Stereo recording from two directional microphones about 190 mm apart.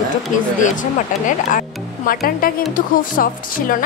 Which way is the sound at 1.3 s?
45° left (ahead or behind).